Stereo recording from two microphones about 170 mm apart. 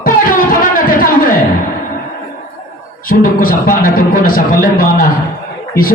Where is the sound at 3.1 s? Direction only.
55° left (ahead or behind).